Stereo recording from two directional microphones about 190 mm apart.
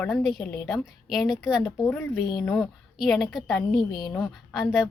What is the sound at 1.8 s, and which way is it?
A woman's voice, 10° left (ahead or behind).